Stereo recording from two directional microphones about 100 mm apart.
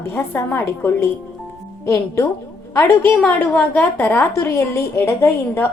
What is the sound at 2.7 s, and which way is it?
A woman's voice, 20° left (ahead or behind).